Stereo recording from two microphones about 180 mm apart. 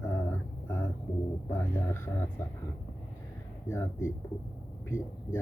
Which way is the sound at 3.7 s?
15° left (ahead or behind).